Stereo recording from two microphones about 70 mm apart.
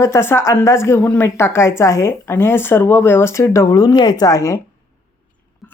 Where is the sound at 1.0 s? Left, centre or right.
Left.